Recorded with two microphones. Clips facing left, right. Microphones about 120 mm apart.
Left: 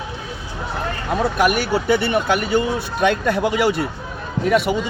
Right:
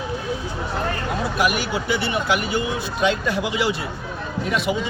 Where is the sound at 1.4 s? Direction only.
50° left (ahead or behind).